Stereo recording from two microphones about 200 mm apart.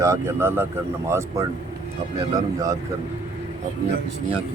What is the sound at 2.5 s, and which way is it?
Speech, 15° right (ahead or behind).